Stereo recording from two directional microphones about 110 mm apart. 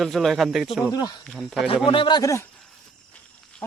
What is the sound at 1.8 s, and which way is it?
Speech, 50° left (ahead or behind).